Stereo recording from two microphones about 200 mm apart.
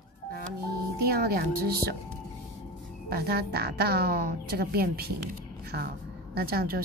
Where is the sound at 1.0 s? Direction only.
50° right (ahead or behind).